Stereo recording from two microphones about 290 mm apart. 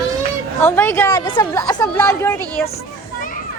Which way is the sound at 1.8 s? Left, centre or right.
Centre.